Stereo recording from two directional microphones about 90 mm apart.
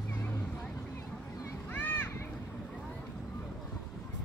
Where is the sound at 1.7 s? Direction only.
20° left (ahead or behind).